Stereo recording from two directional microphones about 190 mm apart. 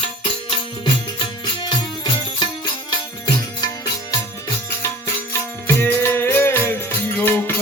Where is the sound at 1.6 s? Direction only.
25° left (ahead or behind).